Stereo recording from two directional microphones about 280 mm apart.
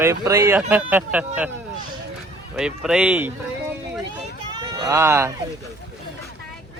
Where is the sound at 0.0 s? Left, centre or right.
Centre.